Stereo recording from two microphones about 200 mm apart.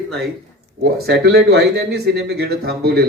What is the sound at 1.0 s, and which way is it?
Speech, 55° right (ahead or behind).